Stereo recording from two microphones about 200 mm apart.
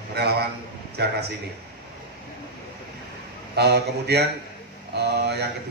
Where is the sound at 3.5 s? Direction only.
55° right (ahead or behind).